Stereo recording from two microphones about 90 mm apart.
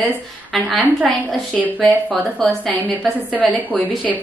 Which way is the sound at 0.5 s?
Centre (ahead or behind).